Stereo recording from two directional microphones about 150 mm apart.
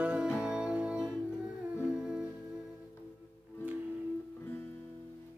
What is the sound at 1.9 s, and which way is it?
Music, 5° right (ahead or behind).